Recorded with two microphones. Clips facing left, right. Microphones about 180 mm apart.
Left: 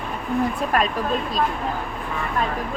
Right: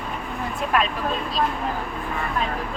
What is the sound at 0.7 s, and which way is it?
Speech, 40° left (ahead or behind).